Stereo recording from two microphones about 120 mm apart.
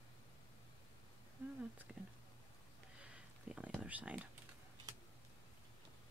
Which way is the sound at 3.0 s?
10° right (ahead or behind).